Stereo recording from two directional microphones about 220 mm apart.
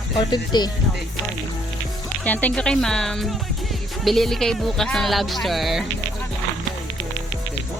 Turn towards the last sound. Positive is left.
turn(degrees=0)  # may be behind; listen again after turning